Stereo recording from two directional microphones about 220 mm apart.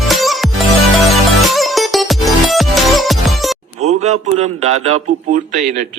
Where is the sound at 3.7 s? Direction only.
30° right (ahead or behind).